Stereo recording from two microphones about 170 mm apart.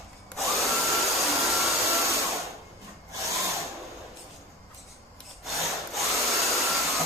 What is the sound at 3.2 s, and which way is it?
Wood, 20° right (ahead or behind).